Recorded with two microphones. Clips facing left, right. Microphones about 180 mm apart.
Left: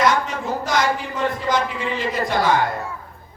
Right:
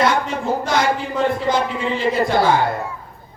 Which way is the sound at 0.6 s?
30° right (ahead or behind).